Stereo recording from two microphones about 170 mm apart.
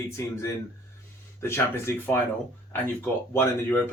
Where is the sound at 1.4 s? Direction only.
15° left (ahead or behind).